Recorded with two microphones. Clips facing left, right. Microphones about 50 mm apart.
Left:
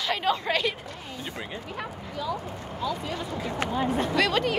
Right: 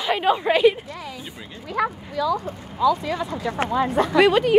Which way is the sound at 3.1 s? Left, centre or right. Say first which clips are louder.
Right 6 dB; right.